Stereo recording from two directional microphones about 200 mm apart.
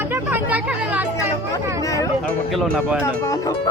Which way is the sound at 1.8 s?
15° left (ahead or behind).